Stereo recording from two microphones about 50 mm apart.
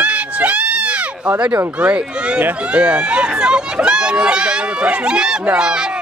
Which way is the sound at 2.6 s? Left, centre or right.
Right.